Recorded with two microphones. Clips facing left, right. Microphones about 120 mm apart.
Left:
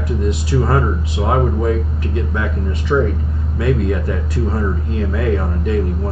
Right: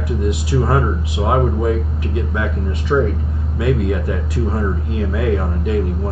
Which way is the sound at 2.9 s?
10° right (ahead or behind).